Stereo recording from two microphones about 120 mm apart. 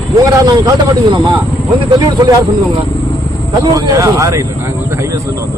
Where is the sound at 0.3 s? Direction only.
35° right (ahead or behind).